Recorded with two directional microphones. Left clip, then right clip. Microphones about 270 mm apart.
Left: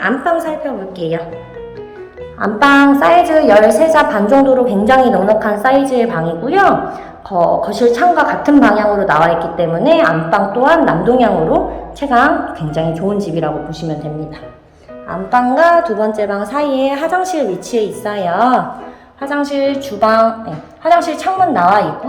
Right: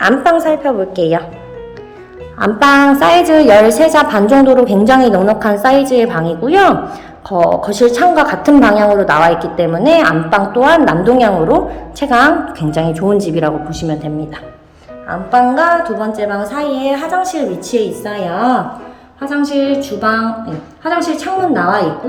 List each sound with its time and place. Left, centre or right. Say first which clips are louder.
0.0 s a woman's voice: right 5 dB; centre
2.4 s a woman's voice: right 1 dB; right
15.3 s a woman's voice: even; centre